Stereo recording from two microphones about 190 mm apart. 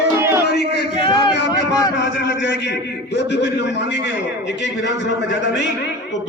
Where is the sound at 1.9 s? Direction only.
65° left (ahead or behind).